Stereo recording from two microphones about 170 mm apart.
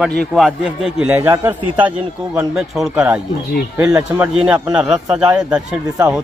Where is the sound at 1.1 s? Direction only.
15° right (ahead or behind).